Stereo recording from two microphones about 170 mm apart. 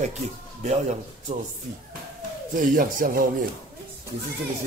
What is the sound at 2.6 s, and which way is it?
Speech, 55° right (ahead or behind).